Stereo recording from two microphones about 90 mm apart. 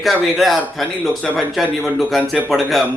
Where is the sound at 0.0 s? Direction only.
Centre (ahead or behind).